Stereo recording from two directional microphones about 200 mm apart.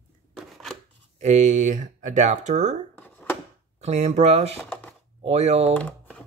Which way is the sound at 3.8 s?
35° right (ahead or behind).